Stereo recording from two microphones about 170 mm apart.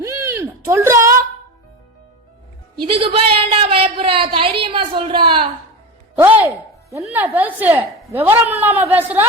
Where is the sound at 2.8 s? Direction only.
30° right (ahead or behind).